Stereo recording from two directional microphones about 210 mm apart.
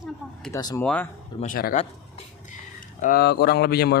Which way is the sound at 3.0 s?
50° left (ahead or behind).